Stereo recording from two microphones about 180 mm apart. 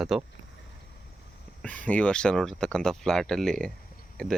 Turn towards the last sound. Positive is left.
turn(degrees=5)  # may be behind; listen again after turning